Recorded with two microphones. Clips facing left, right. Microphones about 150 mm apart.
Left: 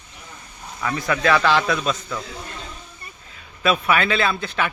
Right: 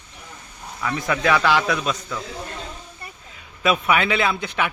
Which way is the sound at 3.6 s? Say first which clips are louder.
Even; 15° right (ahead or behind).